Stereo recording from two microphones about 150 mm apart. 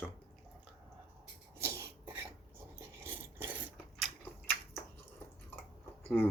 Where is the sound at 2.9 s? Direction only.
15° right (ahead or behind).